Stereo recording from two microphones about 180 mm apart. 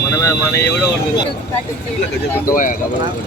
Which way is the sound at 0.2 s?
15° left (ahead or behind).